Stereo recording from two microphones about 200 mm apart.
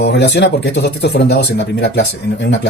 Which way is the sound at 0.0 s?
60° left (ahead or behind).